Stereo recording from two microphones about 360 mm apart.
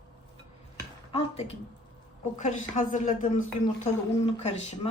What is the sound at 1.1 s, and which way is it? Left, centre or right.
A woman's voice, centre.